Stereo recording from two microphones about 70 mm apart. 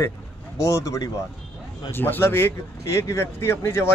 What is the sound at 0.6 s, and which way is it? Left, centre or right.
Speech, left.